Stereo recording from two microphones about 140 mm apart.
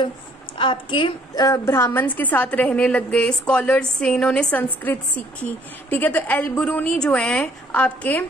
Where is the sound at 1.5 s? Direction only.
20° left (ahead or behind).